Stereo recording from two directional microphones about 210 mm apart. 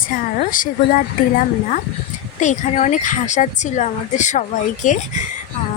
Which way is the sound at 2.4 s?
35° left (ahead or behind).